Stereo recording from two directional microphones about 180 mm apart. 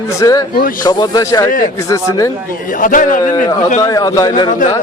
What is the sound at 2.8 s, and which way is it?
Speech, 50° left (ahead or behind).